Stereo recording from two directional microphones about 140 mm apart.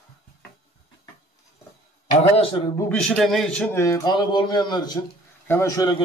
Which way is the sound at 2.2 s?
45° left (ahead or behind).